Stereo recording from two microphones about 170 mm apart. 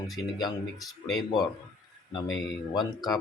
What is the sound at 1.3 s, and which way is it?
Speech, 25° left (ahead or behind).